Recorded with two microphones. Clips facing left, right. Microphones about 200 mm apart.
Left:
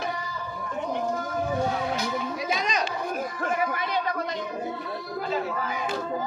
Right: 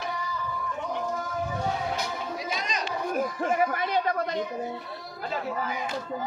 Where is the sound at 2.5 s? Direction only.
90° left.